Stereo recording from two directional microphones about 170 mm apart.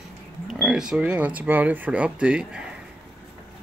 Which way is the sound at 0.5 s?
Centre (ahead or behind).